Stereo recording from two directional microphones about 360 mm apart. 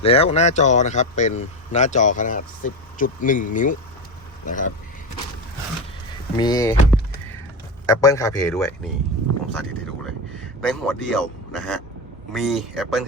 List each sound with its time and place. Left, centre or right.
0.0 s speech: centre
6.3 s a man's voice: centre